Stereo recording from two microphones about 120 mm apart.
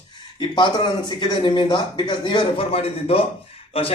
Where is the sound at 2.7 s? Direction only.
55° left (ahead or behind).